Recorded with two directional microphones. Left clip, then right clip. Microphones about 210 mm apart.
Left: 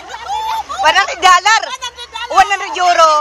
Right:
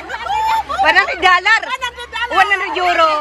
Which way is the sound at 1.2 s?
20° left (ahead or behind).